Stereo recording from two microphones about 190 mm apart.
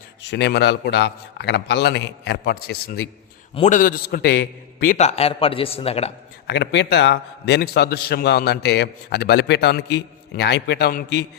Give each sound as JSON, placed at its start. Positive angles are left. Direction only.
{"t": 0.2, "sound": "a man's voice", "side_deg": 65}
{"t": 3.5, "sound": "a man's voice", "side_deg": 40}
{"t": 4.9, "sound": "a man's voice", "side_deg": 35}
{"t": 6.5, "sound": "a man's voice", "side_deg": 65}